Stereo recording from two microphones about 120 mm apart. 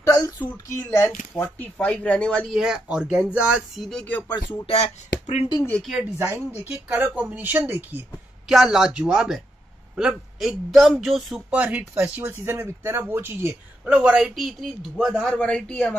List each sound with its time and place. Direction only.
0.0 s speech: 30° left (ahead or behind)
1.3 s speech: 10° left (ahead or behind)
2.5 s speech: 5° right (ahead or behind)
4.6 s speech: 70° left (ahead or behind)
5.6 s speech: 5° left (ahead or behind)
6.1 s speech: 15° right (ahead or behind)
8.5 s speech: 5° right (ahead or behind)
11.5 s speech: 10° right (ahead or behind)
13.8 s speech: 10° right (ahead or behind); by 16.0 s 15° left (ahead or behind)